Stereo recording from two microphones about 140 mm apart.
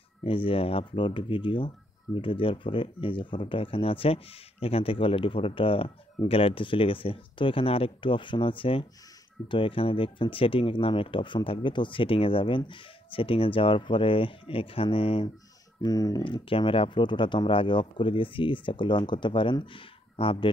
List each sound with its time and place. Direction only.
0.2 s speech: 40° left (ahead or behind)
15.8 s speech: 25° left (ahead or behind)
16.4 s speech: 40° left (ahead or behind)